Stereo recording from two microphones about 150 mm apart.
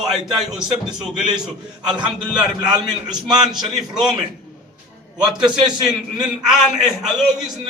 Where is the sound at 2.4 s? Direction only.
30° right (ahead or behind).